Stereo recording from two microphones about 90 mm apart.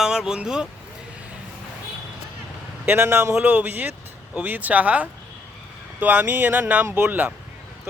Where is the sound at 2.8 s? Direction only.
25° right (ahead or behind).